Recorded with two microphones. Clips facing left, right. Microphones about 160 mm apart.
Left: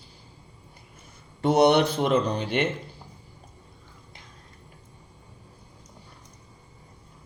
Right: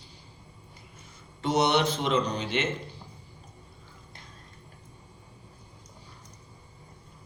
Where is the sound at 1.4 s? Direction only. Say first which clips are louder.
Left 6 dB; 55° left (ahead or behind).